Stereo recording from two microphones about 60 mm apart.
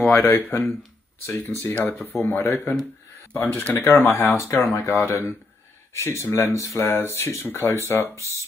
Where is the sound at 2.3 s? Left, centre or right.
Left.